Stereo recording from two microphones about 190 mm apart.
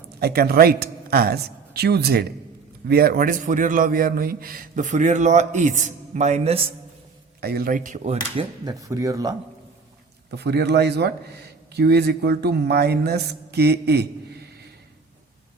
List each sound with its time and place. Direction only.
0.2 s a man's voice: 55° right (ahead or behind); by 6.7 s 30° right (ahead or behind)
7.4 s a man's voice: 55° right (ahead or behind); by 8.4 s 35° right (ahead or behind)
8.6 s speech: 15° right (ahead or behind)
10.3 s a man's voice: 60° right (ahead or behind)